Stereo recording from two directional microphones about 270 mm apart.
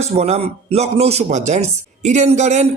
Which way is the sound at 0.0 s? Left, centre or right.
Right.